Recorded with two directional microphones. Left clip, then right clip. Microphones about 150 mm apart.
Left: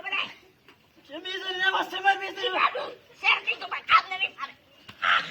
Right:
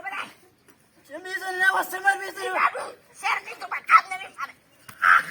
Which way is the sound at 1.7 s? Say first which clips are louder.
Right 1 dB; 10° left (ahead or behind).